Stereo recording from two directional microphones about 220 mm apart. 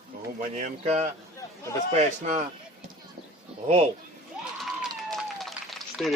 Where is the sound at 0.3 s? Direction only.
35° right (ahead or behind).